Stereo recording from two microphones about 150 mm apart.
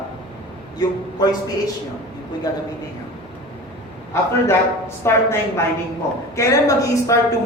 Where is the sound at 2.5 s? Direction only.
25° left (ahead or behind).